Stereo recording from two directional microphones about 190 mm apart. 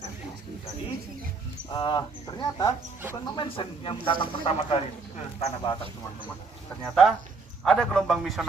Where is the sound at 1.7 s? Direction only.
25° left (ahead or behind).